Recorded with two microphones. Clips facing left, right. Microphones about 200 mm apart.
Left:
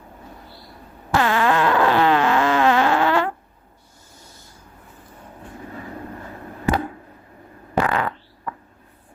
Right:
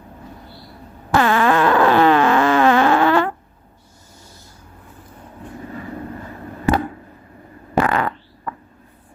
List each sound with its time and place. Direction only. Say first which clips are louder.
1.1 s fart: right 3 dB; 60° right (ahead or behind)
7.8 s fart: right 3 dB; 50° right (ahead or behind)